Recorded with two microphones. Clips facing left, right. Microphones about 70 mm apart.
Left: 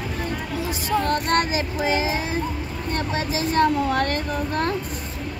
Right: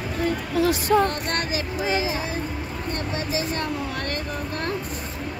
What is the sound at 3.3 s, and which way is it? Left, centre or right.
Speech, left.